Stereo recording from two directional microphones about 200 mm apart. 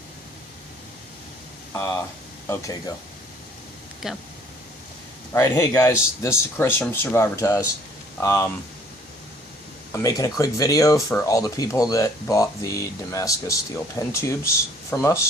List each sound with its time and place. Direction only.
1.7 s speech: 15° left (ahead or behind)
4.0 s speech: centre (ahead or behind)
5.3 s speech: 15° left (ahead or behind)
9.9 s speech: 15° left (ahead or behind)